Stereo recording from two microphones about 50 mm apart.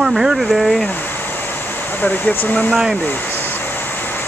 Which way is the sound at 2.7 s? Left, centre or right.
Centre.